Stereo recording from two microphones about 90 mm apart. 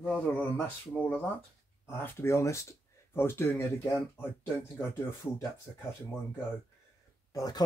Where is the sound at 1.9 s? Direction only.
30° left (ahead or behind).